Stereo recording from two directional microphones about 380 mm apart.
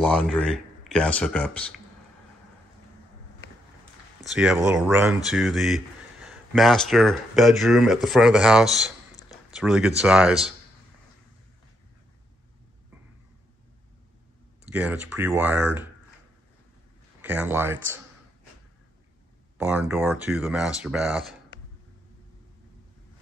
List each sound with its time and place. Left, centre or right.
0.1 s speech: centre
4.2 s speech: centre
14.7 s speech: centre
17.2 s speech: centre
19.6 s speech: centre